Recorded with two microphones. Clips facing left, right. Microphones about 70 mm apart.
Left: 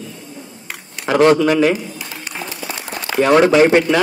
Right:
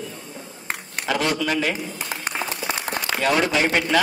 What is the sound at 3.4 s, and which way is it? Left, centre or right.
Speech, left.